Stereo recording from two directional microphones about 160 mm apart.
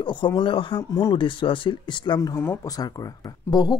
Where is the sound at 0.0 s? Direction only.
30° left (ahead or behind).